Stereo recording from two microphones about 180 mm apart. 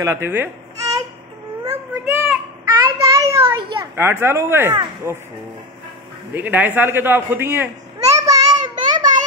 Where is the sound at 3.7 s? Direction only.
15° right (ahead or behind).